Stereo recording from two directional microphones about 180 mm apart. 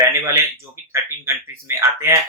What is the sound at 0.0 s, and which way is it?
Speech, 15° right (ahead or behind).